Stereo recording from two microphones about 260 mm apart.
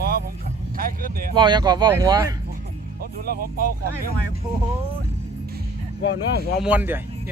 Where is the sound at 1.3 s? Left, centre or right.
Centre.